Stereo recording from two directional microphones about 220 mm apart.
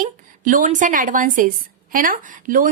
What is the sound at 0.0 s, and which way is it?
A woman's voice, 35° right (ahead or behind).